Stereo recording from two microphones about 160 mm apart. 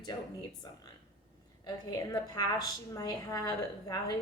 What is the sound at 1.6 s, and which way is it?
A woman's voice, 25° left (ahead or behind).